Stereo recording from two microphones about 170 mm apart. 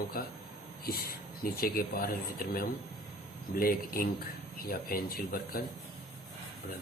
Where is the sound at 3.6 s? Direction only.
60° left (ahead or behind).